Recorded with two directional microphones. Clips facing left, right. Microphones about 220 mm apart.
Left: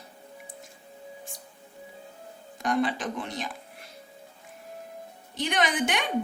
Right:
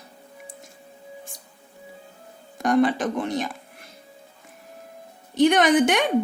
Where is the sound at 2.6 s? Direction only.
45° right (ahead or behind).